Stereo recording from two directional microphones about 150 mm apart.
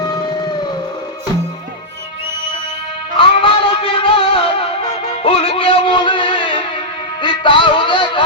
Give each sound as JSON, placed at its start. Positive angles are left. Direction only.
{"t": 3.2, "sound": "music", "side_deg": 35}